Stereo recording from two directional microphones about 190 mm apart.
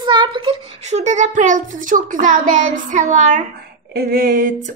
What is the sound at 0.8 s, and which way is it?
Speech, 35° right (ahead or behind).